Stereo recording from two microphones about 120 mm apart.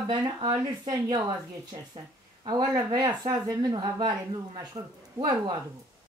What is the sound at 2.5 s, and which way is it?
Speech, 35° right (ahead or behind).